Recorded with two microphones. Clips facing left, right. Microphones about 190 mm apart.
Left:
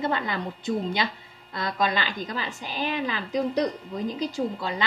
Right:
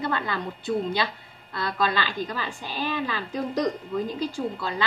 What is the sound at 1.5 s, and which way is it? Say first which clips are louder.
A woman's voice: even; 20° left (ahead or behind).